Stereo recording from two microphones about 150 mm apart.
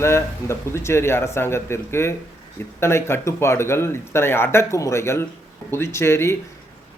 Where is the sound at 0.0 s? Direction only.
15° left (ahead or behind).